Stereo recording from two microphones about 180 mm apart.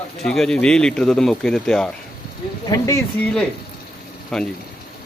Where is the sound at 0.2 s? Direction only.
Centre (ahead or behind).